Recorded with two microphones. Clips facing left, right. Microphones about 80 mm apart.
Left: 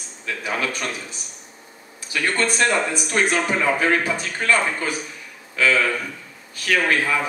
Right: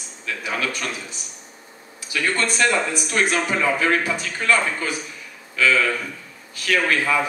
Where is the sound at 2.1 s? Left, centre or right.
Centre.